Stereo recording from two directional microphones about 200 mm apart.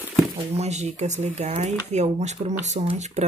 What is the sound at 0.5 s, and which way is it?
Speech, 35° right (ahead or behind).